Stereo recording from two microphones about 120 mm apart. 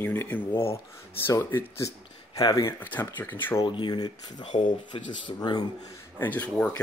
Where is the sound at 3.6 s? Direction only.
40° left (ahead or behind).